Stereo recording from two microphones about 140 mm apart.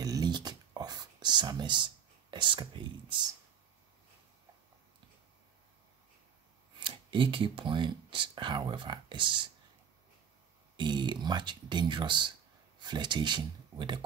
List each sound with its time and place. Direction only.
0.0 s a sound: 25° right (ahead or behind)
2.3 s speech: 35° right (ahead or behind)
6.8 s speech: 35° right (ahead or behind)
10.8 s speech: 35° right (ahead or behind)